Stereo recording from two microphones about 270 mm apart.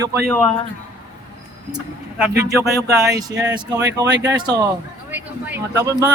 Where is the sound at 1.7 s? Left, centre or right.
Centre.